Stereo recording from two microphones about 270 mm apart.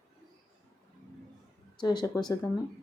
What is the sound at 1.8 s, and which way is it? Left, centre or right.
Speech, centre.